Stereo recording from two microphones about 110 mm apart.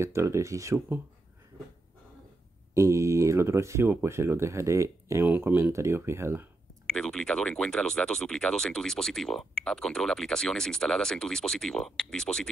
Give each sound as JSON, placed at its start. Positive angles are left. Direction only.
{"t": 0.0, "sound": "speech", "side_deg": -25}
{"t": 2.7, "sound": "speech", "side_deg": -25}
{"t": 6.9, "sound": "speech", "side_deg": 5}